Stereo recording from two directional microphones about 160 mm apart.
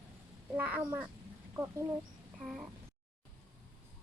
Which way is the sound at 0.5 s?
10° right (ahead or behind).